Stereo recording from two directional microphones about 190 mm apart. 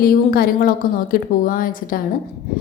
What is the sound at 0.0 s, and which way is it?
A woman's voice, 50° left (ahead or behind).